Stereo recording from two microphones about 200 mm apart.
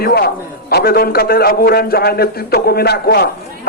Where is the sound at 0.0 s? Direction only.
50° left (ahead or behind).